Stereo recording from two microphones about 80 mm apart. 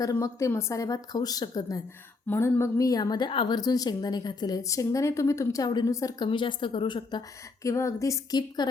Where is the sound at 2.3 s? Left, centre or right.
Left.